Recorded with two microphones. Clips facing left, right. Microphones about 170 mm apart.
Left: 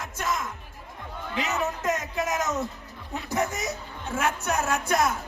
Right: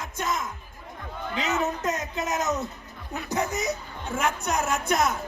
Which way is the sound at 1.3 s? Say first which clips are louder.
Right 1 dB; 20° right (ahead or behind).